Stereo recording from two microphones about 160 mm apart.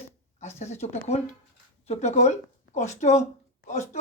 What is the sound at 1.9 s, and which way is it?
Speech, 45° left (ahead or behind).